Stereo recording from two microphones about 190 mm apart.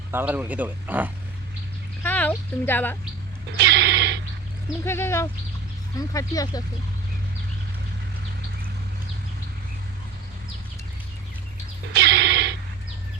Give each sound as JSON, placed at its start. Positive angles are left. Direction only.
{"t": 0.1, "sound": "speech", "side_deg": -10}
{"t": 2.0, "sound": "speech", "side_deg": 10}
{"t": 3.6, "sound": "music", "side_deg": -60}
{"t": 4.8, "sound": "speech", "side_deg": 15}
{"t": 11.9, "sound": "music", "side_deg": -60}